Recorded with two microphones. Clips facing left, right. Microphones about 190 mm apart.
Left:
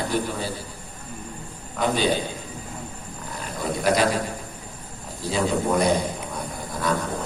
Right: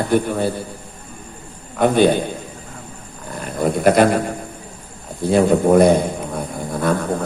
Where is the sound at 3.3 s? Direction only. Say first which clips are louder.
Right 8 dB; 55° right (ahead or behind).